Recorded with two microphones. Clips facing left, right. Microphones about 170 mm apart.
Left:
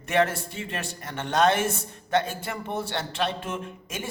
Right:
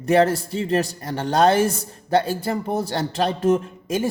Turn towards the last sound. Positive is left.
turn(degrees=-35)  # may be behind; listen again after turning